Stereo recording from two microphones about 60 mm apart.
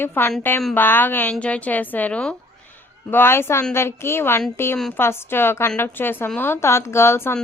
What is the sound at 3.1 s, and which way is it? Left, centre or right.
A woman's voice, left.